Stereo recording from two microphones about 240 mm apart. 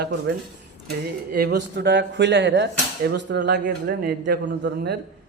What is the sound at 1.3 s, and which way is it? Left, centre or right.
A man's voice, right.